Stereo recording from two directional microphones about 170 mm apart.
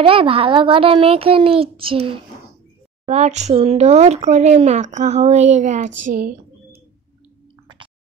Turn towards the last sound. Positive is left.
turn(degrees=-55)  # may be behind; listen again after turning